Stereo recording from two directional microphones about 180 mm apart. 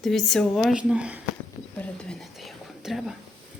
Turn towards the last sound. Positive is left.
turn(degrees=0)  # may be behind; listen again after turning